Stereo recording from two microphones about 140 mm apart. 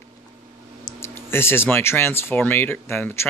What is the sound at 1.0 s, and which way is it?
Speech, 15° left (ahead or behind).